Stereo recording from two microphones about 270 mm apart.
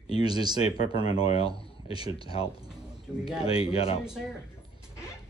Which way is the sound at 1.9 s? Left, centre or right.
Centre.